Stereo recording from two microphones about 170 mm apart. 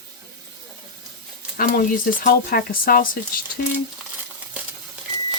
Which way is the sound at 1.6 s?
55° left (ahead or behind).